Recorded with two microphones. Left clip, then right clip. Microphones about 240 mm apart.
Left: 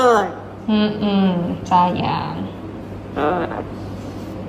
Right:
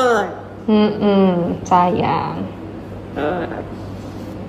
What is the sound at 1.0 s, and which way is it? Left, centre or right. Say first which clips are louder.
Speech: right 5 dB; left.